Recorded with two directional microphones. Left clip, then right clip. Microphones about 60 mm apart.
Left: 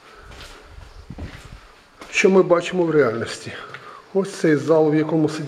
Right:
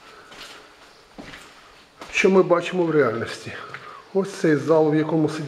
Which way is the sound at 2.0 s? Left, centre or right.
Left.